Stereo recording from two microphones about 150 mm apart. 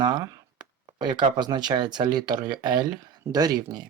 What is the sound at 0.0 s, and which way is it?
Speech, 30° right (ahead or behind).